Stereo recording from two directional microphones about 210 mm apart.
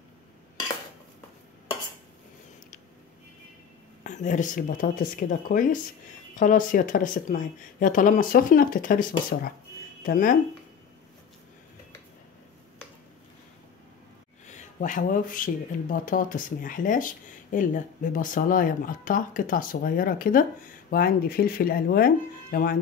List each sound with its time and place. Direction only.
4.0 s speech: 35° left (ahead or behind)
14.5 s speech: 35° left (ahead or behind)